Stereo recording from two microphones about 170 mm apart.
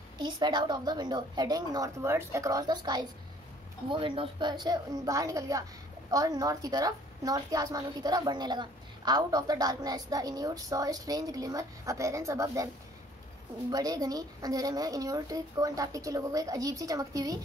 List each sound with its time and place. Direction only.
0.2 s a woman's voice: 25° right (ahead or behind)
13.7 s a woman's voice: 20° right (ahead or behind)